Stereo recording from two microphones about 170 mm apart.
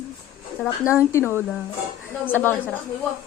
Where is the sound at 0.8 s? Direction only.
15° left (ahead or behind).